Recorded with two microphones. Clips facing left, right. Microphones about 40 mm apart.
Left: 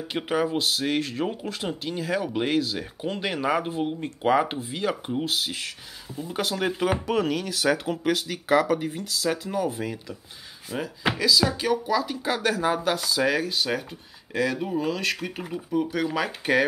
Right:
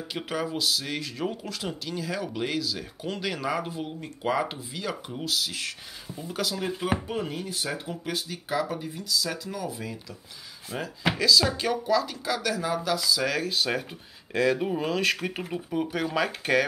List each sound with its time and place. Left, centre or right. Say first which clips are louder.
0.3 s speech: left 4 dB; left
5.5 s speech: left 1 dB; centre
6.4 s speech: left 4 dB; left
6.8 s speech: left 7 dB; left
10.7 s speech: left 2 dB; centre
12.3 s speech: left 7 dB; left
13.2 s speech: left 4 dB; centre
13.5 s speech: left 1 dB; centre
16.1 s speech: left 1 dB; centre